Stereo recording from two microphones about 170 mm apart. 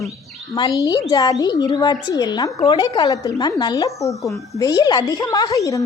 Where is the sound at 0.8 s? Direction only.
20° left (ahead or behind).